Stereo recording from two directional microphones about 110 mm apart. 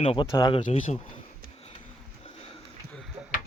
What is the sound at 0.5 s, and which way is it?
Speech, 70° left (ahead or behind).